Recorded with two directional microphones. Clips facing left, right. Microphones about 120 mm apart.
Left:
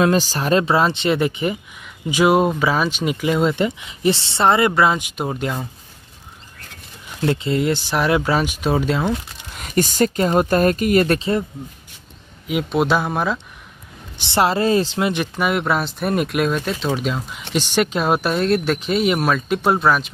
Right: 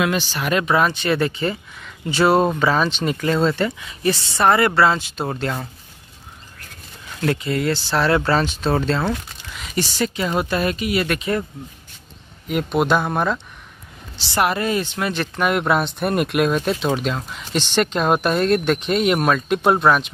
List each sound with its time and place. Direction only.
0.0 s speech: 40° left (ahead or behind); by 5.7 s 10° left (ahead or behind)
7.2 s speech: 25° left (ahead or behind)
9.5 s speech: 50° left (ahead or behind)
11.1 s speech: 25° left (ahead or behind)
12.4 s speech: 5° left (ahead or behind)
14.2 s speech: 25° left (ahead or behind)
15.0 s speech: 20° left (ahead or behind)
15.3 s speech: centre (ahead or behind)